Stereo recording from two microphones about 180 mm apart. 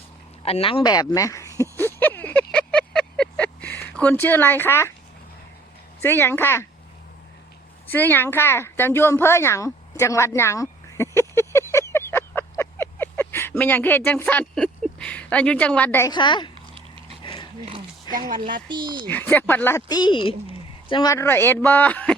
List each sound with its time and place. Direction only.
0.4 s speech: 30° left (ahead or behind)
1.7 s vehicle: 10° left (ahead or behind)
6.0 s speech: 10° left (ahead or behind)
7.9 s speech: 10° left (ahead or behind)
16.1 s speech: 25° left (ahead or behind)
16.7 s a sound: 30° right (ahead or behind)
17.2 s a sound: 25° left (ahead or behind)
18.1 s speech: 25° left (ahead or behind)
18.7 s speech: 25° right (ahead or behind)
19.0 s speech: 10° left (ahead or behind)